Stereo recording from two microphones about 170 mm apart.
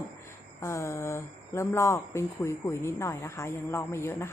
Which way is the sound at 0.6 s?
15° left (ahead or behind).